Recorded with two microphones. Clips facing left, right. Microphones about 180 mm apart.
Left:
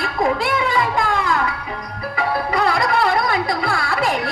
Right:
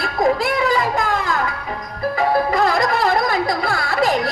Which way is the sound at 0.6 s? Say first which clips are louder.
Right 1 dB; 40° right (ahead or behind).